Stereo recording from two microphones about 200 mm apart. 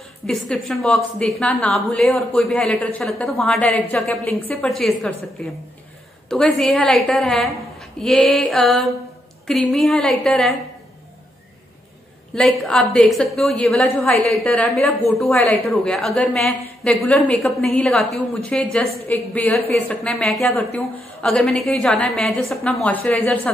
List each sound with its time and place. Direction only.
0.3 s a woman's voice: 5° left (ahead or behind)
12.4 s a woman's voice: centre (ahead or behind)